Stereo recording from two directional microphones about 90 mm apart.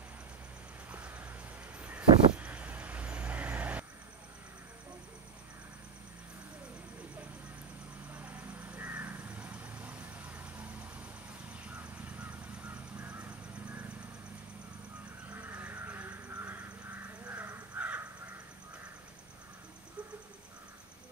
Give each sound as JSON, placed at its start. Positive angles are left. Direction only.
{"t": 0.9, "sound": "vehicle", "side_deg": -20}
{"t": 8.1, "sound": "crow", "side_deg": -20}
{"t": 11.6, "sound": "a sound", "side_deg": -15}
{"t": 15.3, "sound": "crow", "side_deg": -20}